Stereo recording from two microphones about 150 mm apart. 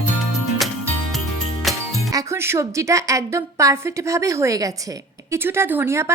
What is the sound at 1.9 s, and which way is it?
A woman's voice, 20° right (ahead or behind).